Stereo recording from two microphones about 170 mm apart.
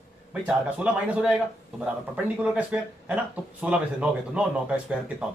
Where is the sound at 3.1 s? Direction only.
5° right (ahead or behind).